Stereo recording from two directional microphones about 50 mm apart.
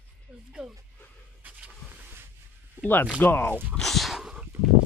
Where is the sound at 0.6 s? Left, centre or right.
Centre.